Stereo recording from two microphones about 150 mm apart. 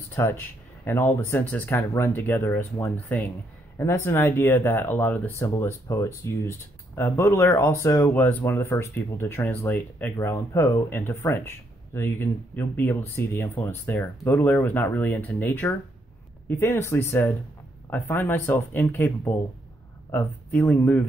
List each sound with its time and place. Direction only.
0.1 s speech: 15° left (ahead or behind)